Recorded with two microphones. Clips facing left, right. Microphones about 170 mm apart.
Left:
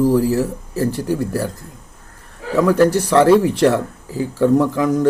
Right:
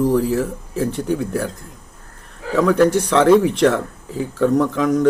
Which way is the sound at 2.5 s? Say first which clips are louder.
Left 1 dB; 5° left (ahead or behind).